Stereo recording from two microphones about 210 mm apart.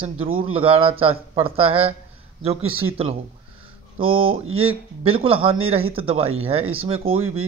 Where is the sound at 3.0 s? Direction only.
25° right (ahead or behind).